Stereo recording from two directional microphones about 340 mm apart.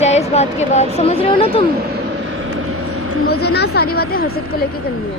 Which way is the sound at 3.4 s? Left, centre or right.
Left.